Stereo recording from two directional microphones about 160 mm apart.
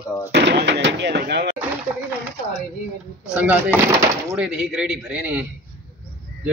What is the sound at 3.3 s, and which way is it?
Speech, 10° right (ahead or behind).